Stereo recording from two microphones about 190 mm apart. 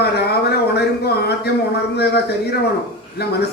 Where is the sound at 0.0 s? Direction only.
60° left (ahead or behind).